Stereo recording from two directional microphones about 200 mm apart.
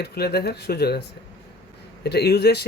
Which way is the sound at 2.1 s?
55° left (ahead or behind).